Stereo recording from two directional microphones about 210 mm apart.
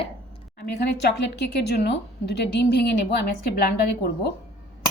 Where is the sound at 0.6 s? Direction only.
50° left (ahead or behind).